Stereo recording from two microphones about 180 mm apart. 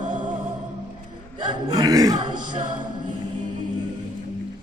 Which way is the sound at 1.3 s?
25° right (ahead or behind).